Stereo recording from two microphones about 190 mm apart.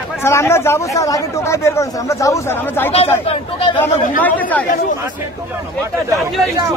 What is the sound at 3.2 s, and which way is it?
Speech, 25° left (ahead or behind).